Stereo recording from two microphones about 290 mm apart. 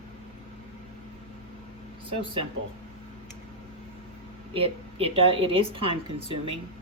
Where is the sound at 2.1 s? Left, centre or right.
Centre.